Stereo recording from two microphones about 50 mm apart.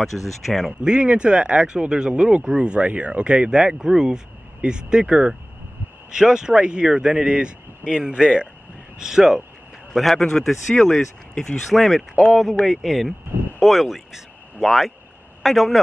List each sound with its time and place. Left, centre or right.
0.1 s speech: centre
0.8 s speech: right
9.9 s speech: centre
11.7 s speech: centre